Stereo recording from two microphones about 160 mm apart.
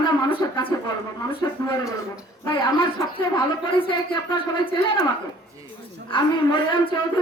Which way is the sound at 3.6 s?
30° left (ahead or behind).